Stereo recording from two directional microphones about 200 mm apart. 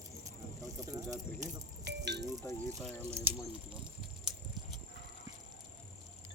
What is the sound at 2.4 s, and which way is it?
Speech, 10° left (ahead or behind).